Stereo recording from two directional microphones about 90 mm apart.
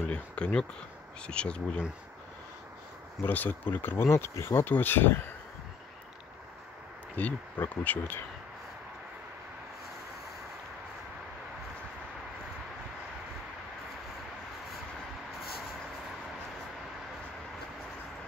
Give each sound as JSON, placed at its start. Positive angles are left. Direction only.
{"t": 0.0, "sound": "speech", "side_deg": 10}
{"t": 3.3, "sound": "speech", "side_deg": 20}
{"t": 7.2, "sound": "speech", "side_deg": 20}